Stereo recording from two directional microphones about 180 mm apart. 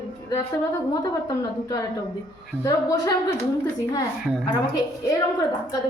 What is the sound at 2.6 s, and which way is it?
Speech, 20° left (ahead or behind).